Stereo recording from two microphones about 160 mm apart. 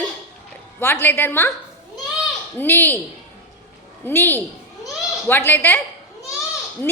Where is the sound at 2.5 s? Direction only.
15° left (ahead or behind).